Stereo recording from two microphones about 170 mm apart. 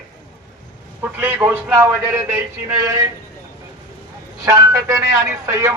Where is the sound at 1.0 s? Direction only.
10° right (ahead or behind).